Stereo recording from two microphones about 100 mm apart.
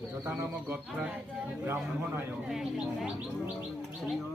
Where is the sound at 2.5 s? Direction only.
5° right (ahead or behind).